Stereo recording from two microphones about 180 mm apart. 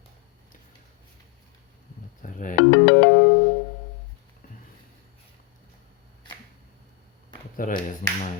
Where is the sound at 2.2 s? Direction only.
45° left (ahead or behind).